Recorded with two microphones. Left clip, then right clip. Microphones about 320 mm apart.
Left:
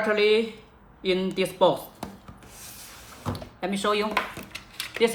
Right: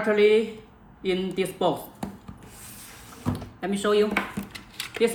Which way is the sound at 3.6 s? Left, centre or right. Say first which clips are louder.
Right 3 dB; left.